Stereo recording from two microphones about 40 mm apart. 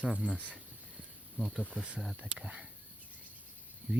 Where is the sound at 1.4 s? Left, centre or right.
Right.